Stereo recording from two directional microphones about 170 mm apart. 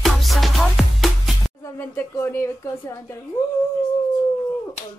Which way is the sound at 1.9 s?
15° left (ahead or behind).